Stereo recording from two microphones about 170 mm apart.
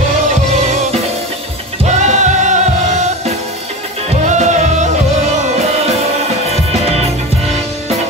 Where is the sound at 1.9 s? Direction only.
45° right (ahead or behind).